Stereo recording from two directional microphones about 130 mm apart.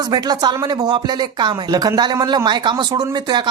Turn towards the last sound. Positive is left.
turn(degrees=-35)  # may be behind; listen again after turning